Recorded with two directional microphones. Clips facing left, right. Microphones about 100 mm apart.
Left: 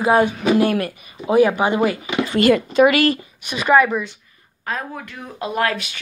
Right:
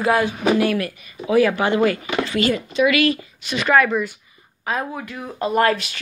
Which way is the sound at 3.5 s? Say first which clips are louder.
Left 2 dB; 10° left (ahead or behind).